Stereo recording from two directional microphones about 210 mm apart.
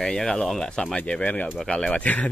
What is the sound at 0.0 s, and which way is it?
Speech, 5° left (ahead or behind).